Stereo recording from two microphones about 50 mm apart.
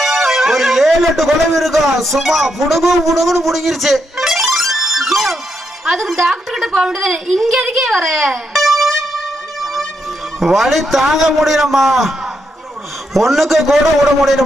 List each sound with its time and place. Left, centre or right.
0.0 s a man's voice: centre
6.3 s a sound: centre
6.7 s a woman's voice: right
7.0 s music: centre
10.4 s a man's voice: centre
13.1 s a man's voice: centre